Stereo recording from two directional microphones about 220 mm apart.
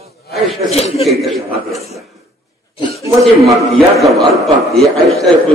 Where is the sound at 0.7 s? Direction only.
30° left (ahead or behind).